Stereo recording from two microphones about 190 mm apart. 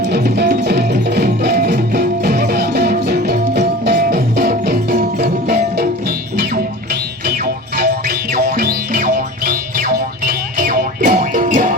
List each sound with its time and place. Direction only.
0.0 s music: 60° right (ahead or behind)
7.3 s music: 55° right (ahead or behind)